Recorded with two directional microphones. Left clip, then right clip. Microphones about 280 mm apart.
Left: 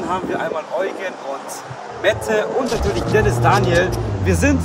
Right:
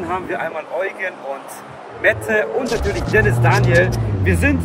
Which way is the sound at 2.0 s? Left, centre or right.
Centre.